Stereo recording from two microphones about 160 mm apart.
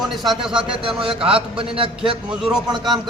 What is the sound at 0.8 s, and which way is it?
A man's voice, 35° right (ahead or behind).